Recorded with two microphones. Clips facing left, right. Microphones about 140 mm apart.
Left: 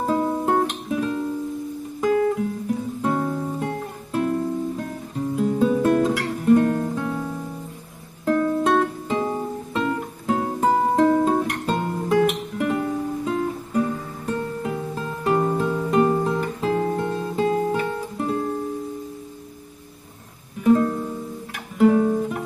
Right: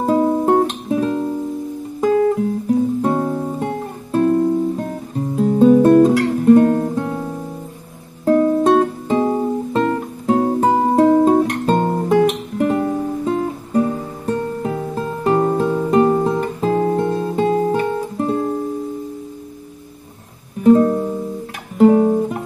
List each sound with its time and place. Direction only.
0.0 s music: 30° right (ahead or behind)
2.0 s guitar: 35° right (ahead or behind)
3.0 s music: 30° right (ahead or behind)
4.1 s music: 40° right (ahead or behind)
6.5 s guitar: 30° right (ahead or behind)
8.3 s music: 30° right (ahead or behind)
11.9 s guitar: 45° right (ahead or behind)
12.2 s music: 35° right (ahead or behind)
16.6 s guitar: 35° right (ahead or behind)
20.6 s music: 30° right (ahead or behind)
21.7 s guitar: 35° right (ahead or behind)